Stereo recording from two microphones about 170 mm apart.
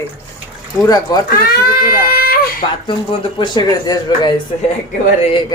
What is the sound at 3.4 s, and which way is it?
A woman's voice, 25° left (ahead or behind).